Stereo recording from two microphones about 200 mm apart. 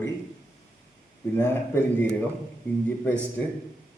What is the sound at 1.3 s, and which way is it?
Speech, 10° left (ahead or behind).